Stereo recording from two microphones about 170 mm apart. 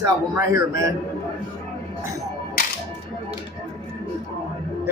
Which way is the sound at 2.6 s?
60° left (ahead or behind).